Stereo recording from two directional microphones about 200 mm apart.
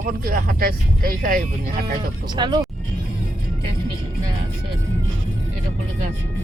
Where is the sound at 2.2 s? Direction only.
20° right (ahead or behind).